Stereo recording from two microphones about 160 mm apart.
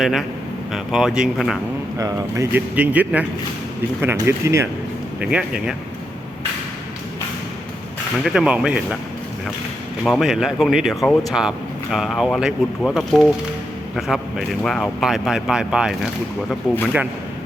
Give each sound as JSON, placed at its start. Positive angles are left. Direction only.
{"t": 0.0, "sound": "a man's voice", "side_deg": 0}
{"t": 2.0, "sound": "speech", "side_deg": -20}
{"t": 5.2, "sound": "a man's voice", "side_deg": -5}
{"t": 8.2, "sound": "a man's voice", "side_deg": -5}
{"t": 10.1, "sound": "a man's voice", "side_deg": 0}